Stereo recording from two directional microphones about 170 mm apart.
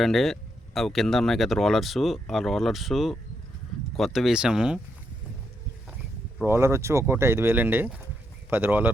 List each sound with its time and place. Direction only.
0.0 s speech: centre (ahead or behind)
6.4 s speech: 15° right (ahead or behind)